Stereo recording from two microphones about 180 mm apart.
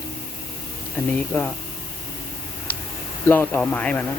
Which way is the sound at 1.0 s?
5° left (ahead or behind).